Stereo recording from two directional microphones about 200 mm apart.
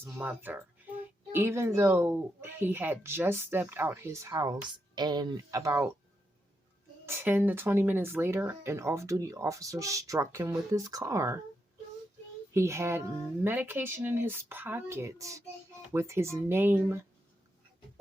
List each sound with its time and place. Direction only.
0.0 s speech: 10° right (ahead or behind)
7.0 s speech: 10° right (ahead or behind)
12.5 s speech: 15° right (ahead or behind)